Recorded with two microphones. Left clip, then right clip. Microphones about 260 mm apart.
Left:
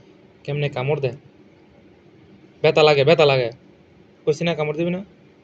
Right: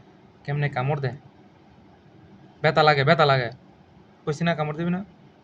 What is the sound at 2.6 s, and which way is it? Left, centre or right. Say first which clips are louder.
A man's voice: left 4 dB; centre.